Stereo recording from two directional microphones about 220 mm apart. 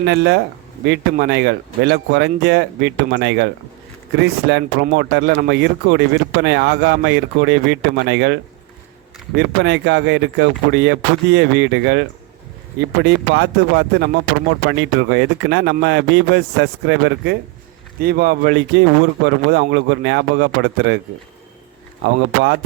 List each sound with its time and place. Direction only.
0.0 s speech: 50° right (ahead or behind)
22.0 s speech: 50° right (ahead or behind)